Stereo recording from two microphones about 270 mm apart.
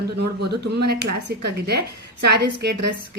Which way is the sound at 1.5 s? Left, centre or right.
Right.